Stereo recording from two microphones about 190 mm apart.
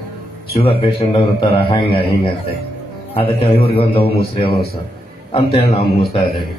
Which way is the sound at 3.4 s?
30° left (ahead or behind).